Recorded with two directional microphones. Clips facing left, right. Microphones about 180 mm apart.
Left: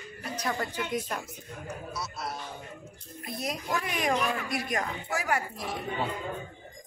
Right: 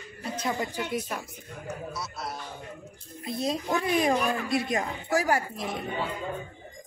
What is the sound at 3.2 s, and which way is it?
A child's voice, 25° right (ahead or behind).